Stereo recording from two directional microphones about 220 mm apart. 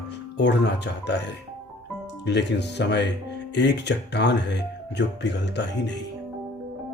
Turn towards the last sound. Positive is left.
turn(degrees=50)  # may be behind; listen again after turning